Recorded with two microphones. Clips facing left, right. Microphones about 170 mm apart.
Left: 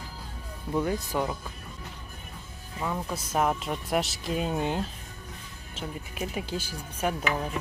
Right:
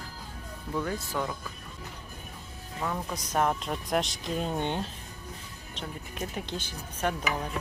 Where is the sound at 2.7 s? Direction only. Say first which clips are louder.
Left 1 dB; 5° left (ahead or behind).